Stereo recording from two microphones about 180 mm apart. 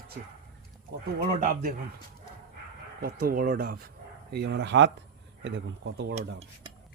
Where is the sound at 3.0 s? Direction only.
55° right (ahead or behind); by 6.1 s 80° right.